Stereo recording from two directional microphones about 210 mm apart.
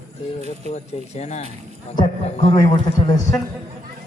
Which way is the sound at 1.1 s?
30° left (ahead or behind).